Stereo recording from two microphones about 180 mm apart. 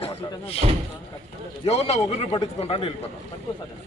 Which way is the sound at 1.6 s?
35° left (ahead or behind).